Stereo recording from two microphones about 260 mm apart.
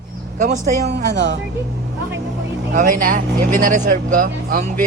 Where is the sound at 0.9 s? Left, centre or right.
Right.